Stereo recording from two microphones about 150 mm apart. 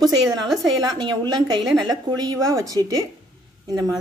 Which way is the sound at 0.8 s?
25° right (ahead or behind).